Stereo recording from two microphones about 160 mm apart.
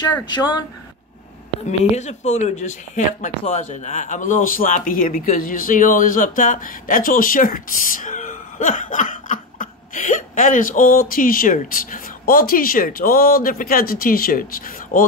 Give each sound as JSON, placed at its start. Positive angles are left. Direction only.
{"t": 0.2, "sound": "speech", "side_deg": 25}
{"t": 1.7, "sound": "speech", "side_deg": 45}